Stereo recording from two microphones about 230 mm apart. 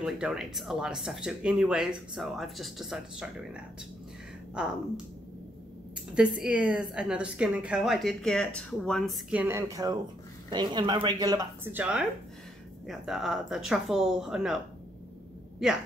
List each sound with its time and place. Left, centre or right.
0.0 s a woman's voice: centre
6.1 s a woman's voice: centre